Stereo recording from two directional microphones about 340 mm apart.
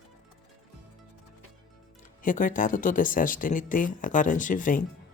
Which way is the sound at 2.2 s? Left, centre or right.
Left.